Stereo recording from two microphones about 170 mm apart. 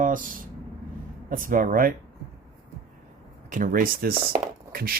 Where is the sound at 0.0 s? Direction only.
50° right (ahead or behind).